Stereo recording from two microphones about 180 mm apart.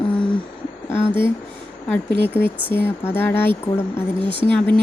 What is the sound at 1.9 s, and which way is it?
A woman's voice, 10° left (ahead or behind).